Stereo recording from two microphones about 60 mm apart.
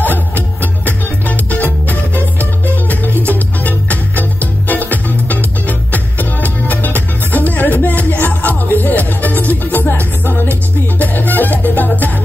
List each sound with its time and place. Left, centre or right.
0.0 s music: left